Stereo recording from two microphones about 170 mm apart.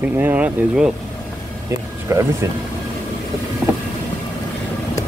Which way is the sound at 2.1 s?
15° right (ahead or behind).